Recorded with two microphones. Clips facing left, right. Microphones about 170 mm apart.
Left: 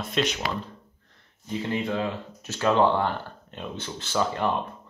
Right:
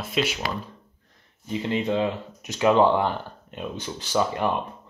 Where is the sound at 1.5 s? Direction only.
20° right (ahead or behind).